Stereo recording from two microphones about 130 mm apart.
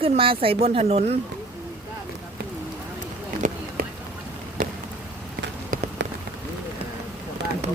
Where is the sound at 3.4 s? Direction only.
90° right.